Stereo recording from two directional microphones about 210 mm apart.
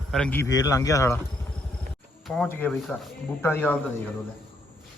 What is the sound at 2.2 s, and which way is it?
Speech, 5° left (ahead or behind).